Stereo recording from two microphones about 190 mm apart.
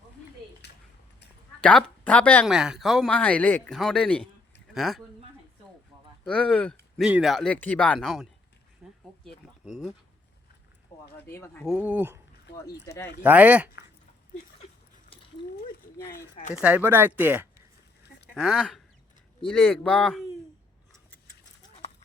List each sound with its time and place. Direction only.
0.6 s a sound: 65° left (ahead or behind)
1.6 s speech: 5° left (ahead or behind)
2.5 s speech: 5° right (ahead or behind)
6.2 s speech: 5° left (ahead or behind)
8.8 s a sound: 5° right (ahead or behind)
11.3 s speech: 15° left (ahead or behind)
11.6 s speech: 5° right (ahead or behind)
13.2 s speech: 10° right (ahead or behind)
16.1 s speech: 40° left (ahead or behind)
16.6 s speech: 5° right (ahead or behind)